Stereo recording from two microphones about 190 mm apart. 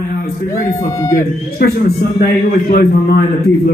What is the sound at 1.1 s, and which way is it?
A man's voice, 45° left (ahead or behind).